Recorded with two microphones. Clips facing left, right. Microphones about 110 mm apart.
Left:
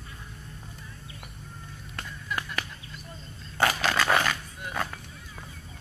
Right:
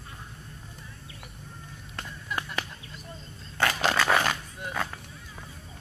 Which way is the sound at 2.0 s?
20° right (ahead or behind).